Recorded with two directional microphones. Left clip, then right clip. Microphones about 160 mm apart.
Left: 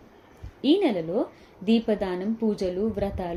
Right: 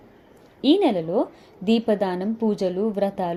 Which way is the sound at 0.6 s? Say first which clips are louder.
Right 3 dB; 30° right (ahead or behind).